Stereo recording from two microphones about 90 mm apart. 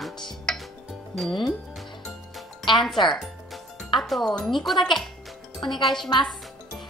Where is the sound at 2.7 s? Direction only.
65° left (ahead or behind).